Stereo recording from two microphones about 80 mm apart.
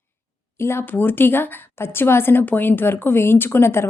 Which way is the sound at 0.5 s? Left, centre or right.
Left.